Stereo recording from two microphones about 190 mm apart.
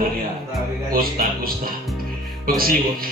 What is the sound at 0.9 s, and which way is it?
Speech, 50° right (ahead or behind).